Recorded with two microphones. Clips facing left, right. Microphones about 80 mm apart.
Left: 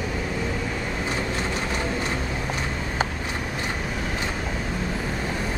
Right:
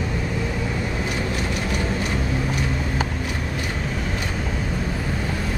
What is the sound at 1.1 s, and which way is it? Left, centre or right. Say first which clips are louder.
Vehicle: right 1 dB; left.